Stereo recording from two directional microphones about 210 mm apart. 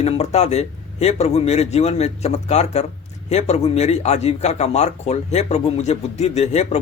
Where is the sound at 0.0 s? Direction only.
30° left (ahead or behind).